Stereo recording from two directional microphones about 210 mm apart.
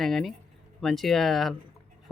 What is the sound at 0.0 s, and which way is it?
Speech, centre (ahead or behind).